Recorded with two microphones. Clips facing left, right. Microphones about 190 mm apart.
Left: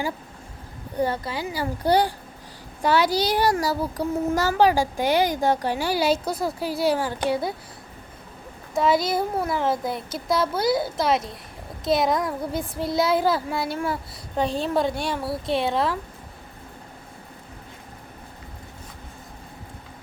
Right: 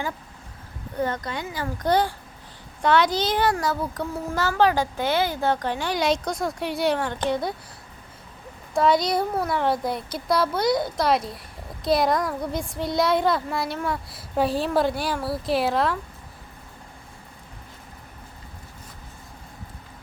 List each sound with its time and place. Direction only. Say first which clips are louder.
0.9 s a woman's voice: left 2 dB; 10° left (ahead or behind)
3.5 s a child's voice: left 2 dB; 35° left (ahead or behind)
3.8 s a woman's voice: left 4 dB; 10° left (ahead or behind)
8.7 s speech: right 1 dB; 5° left (ahead or behind)